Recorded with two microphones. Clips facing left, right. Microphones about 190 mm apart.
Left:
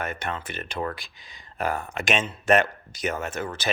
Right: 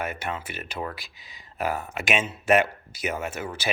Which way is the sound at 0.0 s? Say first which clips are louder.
Even; 10° right (ahead or behind).